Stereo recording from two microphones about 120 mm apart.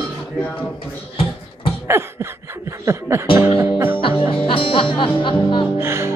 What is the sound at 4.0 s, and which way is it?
Music, 50° left (ahead or behind).